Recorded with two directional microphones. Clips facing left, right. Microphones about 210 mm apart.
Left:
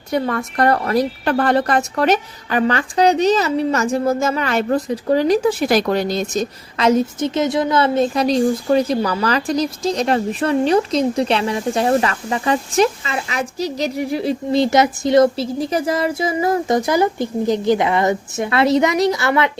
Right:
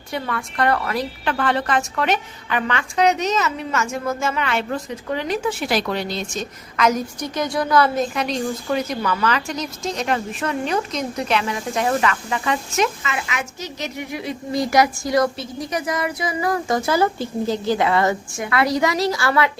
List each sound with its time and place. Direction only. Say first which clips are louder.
0.1 s a woman's voice: left 7 dB; 40° left (ahead or behind); by 19.5 s 20° left (ahead or behind)